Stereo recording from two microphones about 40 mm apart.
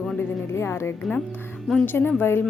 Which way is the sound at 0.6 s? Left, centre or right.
Left.